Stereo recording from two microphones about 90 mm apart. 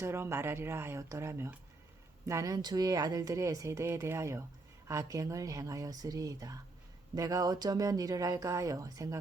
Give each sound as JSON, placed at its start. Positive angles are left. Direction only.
{"t": 0.0, "sound": "speech", "side_deg": -30}